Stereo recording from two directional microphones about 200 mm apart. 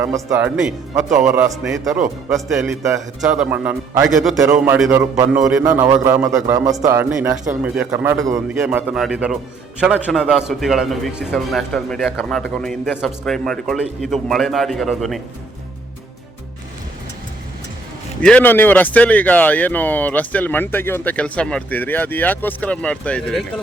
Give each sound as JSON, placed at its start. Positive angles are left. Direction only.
{"t": 0.0, "sound": "a man's voice", "side_deg": -15}
{"t": 18.2, "sound": "speech", "side_deg": 5}